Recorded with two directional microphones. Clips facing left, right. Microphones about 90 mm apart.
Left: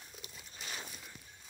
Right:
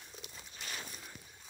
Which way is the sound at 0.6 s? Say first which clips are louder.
Even; 10° left (ahead or behind).